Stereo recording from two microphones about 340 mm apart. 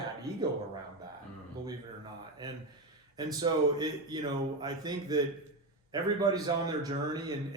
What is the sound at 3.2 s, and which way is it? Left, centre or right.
A man's voice, centre.